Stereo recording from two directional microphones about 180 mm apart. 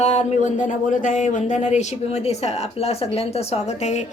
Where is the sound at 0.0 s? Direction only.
40° left (ahead or behind).